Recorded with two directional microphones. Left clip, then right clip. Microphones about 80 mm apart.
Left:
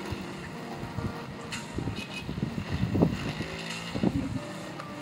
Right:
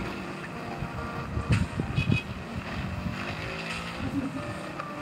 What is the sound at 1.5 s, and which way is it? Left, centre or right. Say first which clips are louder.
Vehicle: right 4 dB; left.